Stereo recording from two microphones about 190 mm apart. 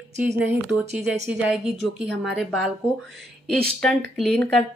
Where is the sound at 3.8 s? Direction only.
Centre (ahead or behind).